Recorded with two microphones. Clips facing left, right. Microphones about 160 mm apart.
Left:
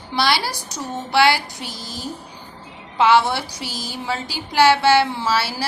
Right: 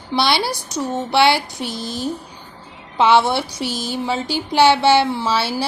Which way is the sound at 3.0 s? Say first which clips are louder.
Right 1 dB; 20° right (ahead or behind).